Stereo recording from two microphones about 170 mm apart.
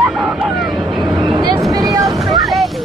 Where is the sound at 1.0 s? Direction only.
25° right (ahead or behind).